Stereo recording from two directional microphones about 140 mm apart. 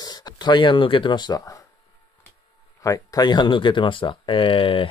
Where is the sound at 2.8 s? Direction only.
25° left (ahead or behind).